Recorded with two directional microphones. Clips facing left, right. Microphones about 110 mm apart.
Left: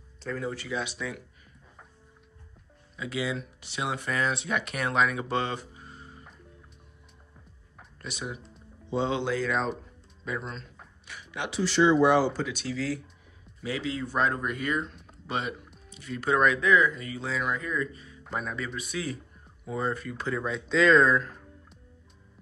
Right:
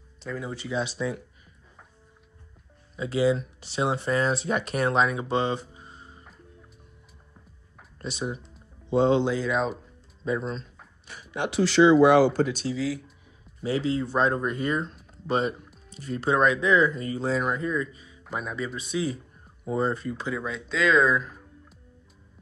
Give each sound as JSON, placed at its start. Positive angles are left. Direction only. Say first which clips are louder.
{"t": 0.2, "sound": "speech", "louder": "left 1 dB", "side_deg": -15}
{"t": 3.0, "sound": "speech", "louder": "right 8 dB", "side_deg": -35}
{"t": 8.0, "sound": "speech", "louder": "right 5 dB", "side_deg": -30}
{"t": 8.9, "sound": "speech", "louder": "right 7 dB", "side_deg": -45}
{"t": 9.2, "sound": "speech", "louder": "right 3 dB", "side_deg": -20}
{"t": 10.2, "sound": "speech", "louder": "right 7 dB", "side_deg": -30}
{"t": 11.1, "sound": "a sound", "louder": "right 5 dB", "side_deg": -40}
{"t": 11.5, "sound": "speech", "louder": "right 5 dB", "side_deg": -90}
{"t": 12.7, "sound": "speech", "louder": "even", "side_deg": -10}
{"t": 13.6, "sound": "speech", "louder": "right 6 dB", "side_deg": -30}
{"t": 17.6, "sound": "speech", "louder": "right 3 dB", "side_deg": -20}
{"t": 20.2, "sound": "speech", "louder": "left 4 dB", "side_deg": 0}